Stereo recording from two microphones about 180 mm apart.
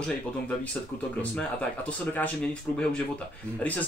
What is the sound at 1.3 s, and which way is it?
Speech, 10° left (ahead or behind).